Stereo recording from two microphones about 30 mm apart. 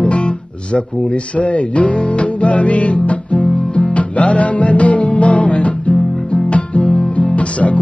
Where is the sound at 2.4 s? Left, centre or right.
Left.